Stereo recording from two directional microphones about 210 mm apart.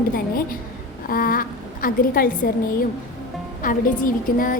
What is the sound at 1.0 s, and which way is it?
A woman's voice, 45° left (ahead or behind).